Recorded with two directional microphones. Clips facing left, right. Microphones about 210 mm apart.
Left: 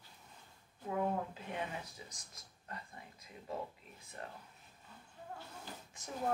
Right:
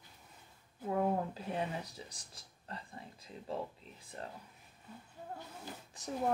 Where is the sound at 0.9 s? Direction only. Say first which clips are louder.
Right 3 dB; 35° right (ahead or behind).